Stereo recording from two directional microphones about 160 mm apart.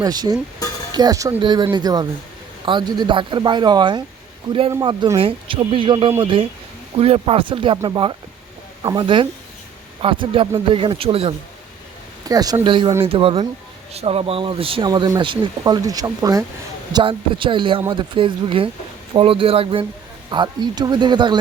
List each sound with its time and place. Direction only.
0.0 s speech: 25° right (ahead or behind)
12.3 s speech: 25° right (ahead or behind)